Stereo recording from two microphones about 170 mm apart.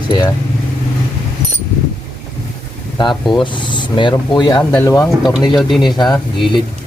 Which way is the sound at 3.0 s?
25° left (ahead or behind).